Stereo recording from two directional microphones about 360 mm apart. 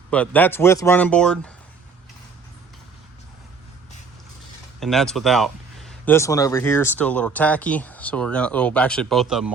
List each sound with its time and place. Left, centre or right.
0.1 s speech: centre
4.8 s speech: centre